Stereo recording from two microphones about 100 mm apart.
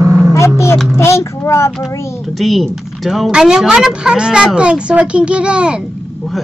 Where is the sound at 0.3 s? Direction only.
30° left (ahead or behind).